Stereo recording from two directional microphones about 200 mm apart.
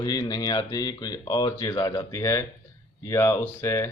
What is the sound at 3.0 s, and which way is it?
Mantra, 15° left (ahead or behind).